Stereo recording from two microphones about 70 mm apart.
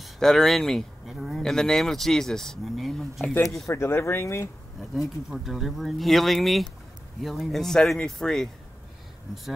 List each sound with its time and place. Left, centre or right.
0.0 s speech: centre
3.6 s speech: left
5.3 s speech: centre